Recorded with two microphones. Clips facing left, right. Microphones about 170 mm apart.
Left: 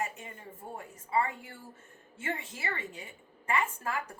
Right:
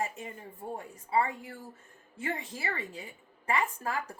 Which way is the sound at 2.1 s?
35° right (ahead or behind).